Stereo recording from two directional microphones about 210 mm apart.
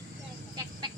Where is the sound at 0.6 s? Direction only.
20° right (ahead or behind).